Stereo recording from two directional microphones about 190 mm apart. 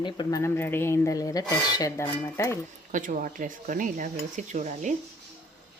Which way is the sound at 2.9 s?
45° right (ahead or behind).